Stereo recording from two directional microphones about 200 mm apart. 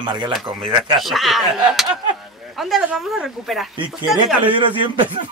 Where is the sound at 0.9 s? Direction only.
Centre (ahead or behind).